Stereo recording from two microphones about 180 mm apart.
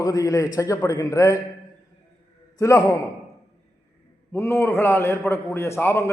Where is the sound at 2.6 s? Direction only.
15° left (ahead or behind).